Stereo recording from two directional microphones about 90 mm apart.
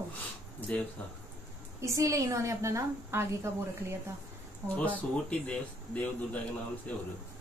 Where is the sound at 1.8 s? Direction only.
35° right (ahead or behind).